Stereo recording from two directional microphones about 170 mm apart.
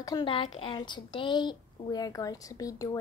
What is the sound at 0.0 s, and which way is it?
A woman's voice, 25° left (ahead or behind).